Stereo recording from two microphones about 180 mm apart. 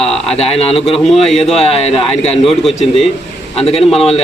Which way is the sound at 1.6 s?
35° left (ahead or behind).